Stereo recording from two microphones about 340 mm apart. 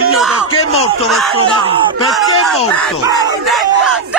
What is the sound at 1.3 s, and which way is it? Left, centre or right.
Crowd, centre.